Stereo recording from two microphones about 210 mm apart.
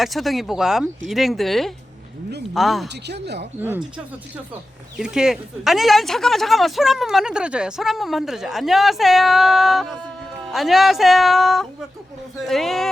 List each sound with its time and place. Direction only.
0.0 s speech: centre (ahead or behind)
2.9 s speech: 55° right (ahead or behind)
3.6 s speech: 10° right (ahead or behind)
4.9 s speech: 5° right (ahead or behind)